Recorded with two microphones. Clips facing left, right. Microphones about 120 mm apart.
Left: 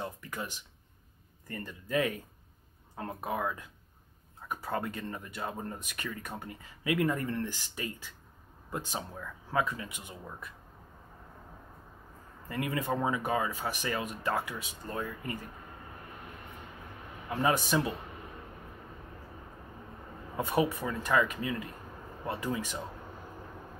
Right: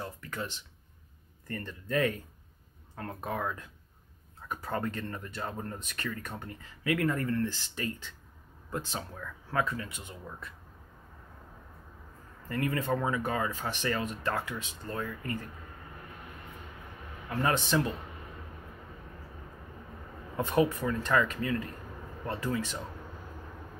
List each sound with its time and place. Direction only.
0.0 s music: 15° left (ahead or behind)
1.5 s speech: 10° left (ahead or behind)
12.4 s speech: 15° left (ahead or behind)
17.3 s speech: 15° left (ahead or behind)
20.3 s speech: 10° left (ahead or behind)